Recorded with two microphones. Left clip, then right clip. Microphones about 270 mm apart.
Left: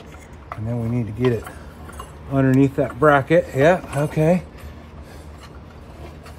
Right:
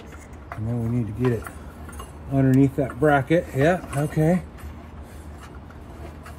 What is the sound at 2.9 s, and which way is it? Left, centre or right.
Speech, left.